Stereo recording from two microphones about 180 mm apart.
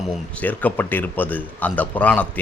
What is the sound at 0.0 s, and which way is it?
A man's voice, 10° left (ahead or behind).